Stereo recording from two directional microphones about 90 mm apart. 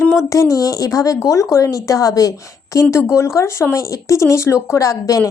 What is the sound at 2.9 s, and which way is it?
Speech, 30° left (ahead or behind).